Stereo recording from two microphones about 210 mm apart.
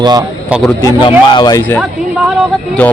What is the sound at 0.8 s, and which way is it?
A man's voice, 20° left (ahead or behind).